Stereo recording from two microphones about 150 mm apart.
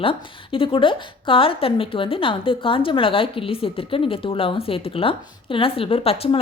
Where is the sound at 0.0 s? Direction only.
35° left (ahead or behind).